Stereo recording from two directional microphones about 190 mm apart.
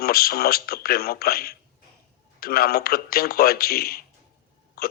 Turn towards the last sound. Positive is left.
turn(degrees=55)  # may be behind; listen again after turning